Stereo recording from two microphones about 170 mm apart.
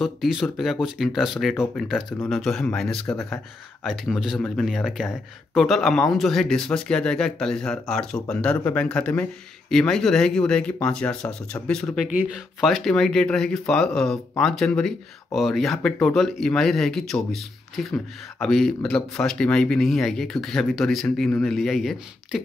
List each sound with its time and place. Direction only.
0.0 s speech: centre (ahead or behind)